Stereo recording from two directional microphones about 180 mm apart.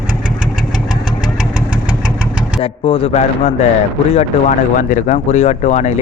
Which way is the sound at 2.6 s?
30° left (ahead or behind).